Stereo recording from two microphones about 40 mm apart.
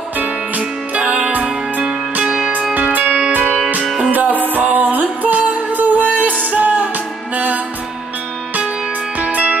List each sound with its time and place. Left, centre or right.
0.9 s music: right
2.2 s music: centre
2.7 s music: right
9.3 s music: right